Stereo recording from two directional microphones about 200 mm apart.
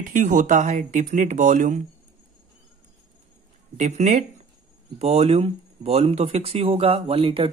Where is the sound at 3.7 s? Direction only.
35° right (ahead or behind).